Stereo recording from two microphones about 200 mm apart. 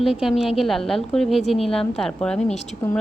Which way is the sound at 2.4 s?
35° left (ahead or behind).